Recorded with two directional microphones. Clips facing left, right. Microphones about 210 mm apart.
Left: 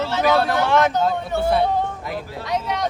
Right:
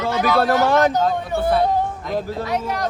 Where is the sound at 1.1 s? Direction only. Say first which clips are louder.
Right 1 dB; centre (ahead or behind).